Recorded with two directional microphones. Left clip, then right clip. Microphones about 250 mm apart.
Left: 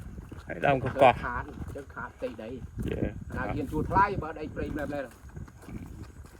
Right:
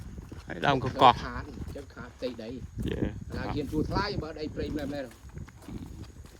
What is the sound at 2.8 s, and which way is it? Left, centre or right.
Speech, centre.